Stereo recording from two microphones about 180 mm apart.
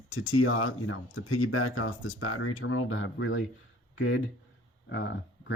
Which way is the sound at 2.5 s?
90° left.